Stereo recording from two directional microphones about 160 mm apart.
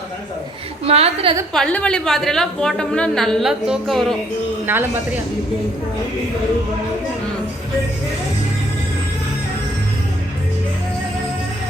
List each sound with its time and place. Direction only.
0.9 s a woman's voice: 40° right (ahead or behind)
1.5 s a woman's voice: 5° left (ahead or behind)
4.6 s speech: 15° right (ahead or behind)